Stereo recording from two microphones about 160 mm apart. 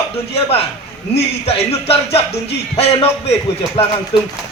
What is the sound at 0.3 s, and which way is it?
Speech, 40° left (ahead or behind).